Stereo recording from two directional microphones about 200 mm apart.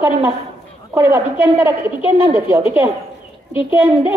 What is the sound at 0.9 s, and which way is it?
A woman's voice, 10° right (ahead or behind).